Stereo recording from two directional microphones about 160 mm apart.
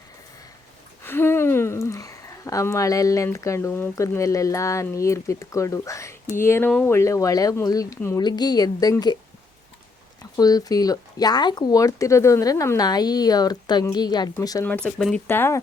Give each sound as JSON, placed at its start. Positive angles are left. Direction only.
{"t": 1.0, "sound": "speech", "side_deg": 15}
{"t": 10.3, "sound": "speech", "side_deg": 25}
{"t": 14.6, "sound": "speech", "side_deg": 10}
{"t": 15.3, "sound": "speech", "side_deg": 15}